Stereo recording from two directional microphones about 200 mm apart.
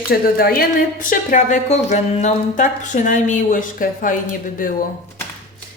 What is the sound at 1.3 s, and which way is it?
A woman's voice, 40° left (ahead or behind).